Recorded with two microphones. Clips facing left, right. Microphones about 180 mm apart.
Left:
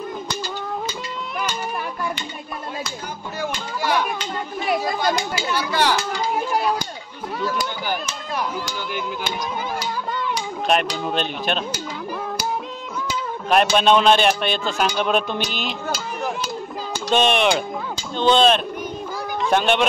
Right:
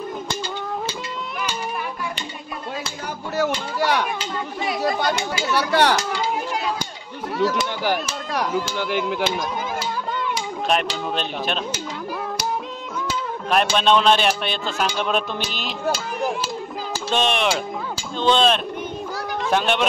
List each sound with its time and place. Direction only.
3.3 s children playing: 70° right (ahead or behind)
5.5 s speech: 65° right (ahead or behind)
10.3 s speech: centre (ahead or behind)
13.5 s speech: 5° left (ahead or behind)
17.1 s speech: centre (ahead or behind)